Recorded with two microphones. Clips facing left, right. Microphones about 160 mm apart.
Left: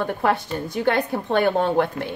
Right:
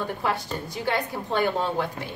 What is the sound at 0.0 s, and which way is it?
A woman's voice, 55° left (ahead or behind).